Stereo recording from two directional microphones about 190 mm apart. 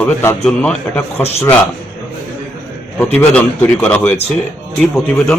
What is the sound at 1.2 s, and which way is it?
Speech, 35° left (ahead or behind).